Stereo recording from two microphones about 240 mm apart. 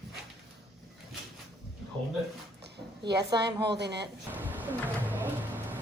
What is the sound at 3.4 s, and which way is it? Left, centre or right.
Speech, right.